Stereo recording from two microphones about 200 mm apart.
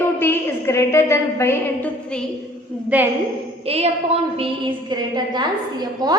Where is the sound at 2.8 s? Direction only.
10° right (ahead or behind).